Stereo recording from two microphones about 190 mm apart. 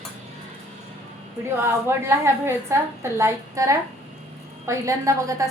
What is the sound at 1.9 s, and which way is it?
A woman's voice, 15° right (ahead or behind).